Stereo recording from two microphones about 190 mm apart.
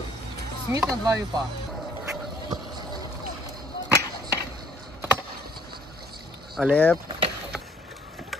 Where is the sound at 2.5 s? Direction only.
20° right (ahead or behind).